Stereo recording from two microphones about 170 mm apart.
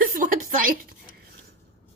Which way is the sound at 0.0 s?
55° right (ahead or behind).